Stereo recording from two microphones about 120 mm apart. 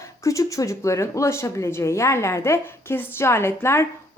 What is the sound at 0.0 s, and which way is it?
Speech, 25° left (ahead or behind).